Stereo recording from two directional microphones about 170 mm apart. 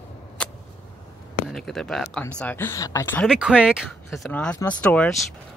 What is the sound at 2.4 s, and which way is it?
Speech, 10° left (ahead or behind).